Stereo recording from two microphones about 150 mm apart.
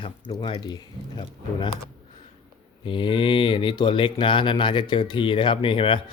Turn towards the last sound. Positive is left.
turn(degrees=35)  # may be behind; listen again after turning